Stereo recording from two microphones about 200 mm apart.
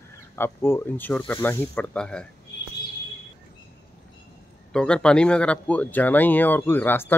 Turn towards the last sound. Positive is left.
turn(degrees=10)  # may be behind; listen again after turning